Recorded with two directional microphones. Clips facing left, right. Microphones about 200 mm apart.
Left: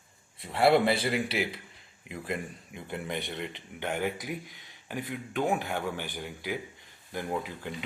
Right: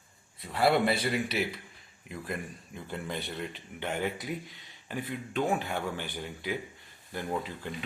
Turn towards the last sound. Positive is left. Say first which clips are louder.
# even
turn(degrees=15)  # may be behind; listen again after turning